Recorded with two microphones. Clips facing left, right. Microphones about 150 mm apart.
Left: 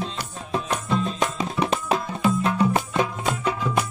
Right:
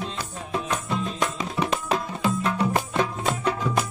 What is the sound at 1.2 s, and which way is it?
Music, 25° left (ahead or behind).